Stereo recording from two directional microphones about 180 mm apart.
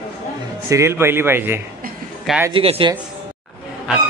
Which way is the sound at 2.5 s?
30° right (ahead or behind).